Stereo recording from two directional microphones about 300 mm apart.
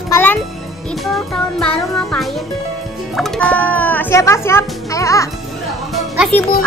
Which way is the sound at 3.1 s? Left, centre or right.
Centre.